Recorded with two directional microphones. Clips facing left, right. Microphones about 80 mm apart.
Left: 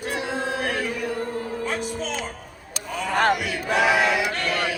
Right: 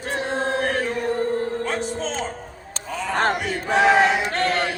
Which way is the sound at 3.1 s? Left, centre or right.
Right.